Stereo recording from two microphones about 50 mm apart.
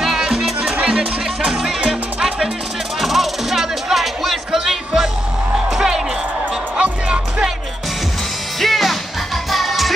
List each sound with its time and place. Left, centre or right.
0.0 s music: centre
3.0 s music: centre
6.8 s music: right
8.5 s music: centre